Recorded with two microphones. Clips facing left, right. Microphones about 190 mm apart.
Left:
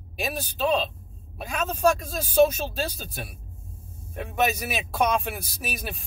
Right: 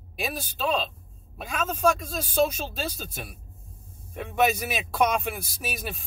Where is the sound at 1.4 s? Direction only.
Centre (ahead or behind).